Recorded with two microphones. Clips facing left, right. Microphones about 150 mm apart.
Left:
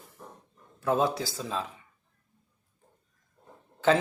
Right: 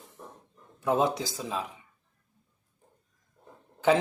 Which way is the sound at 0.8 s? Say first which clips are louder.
Even; 20° right (ahead or behind).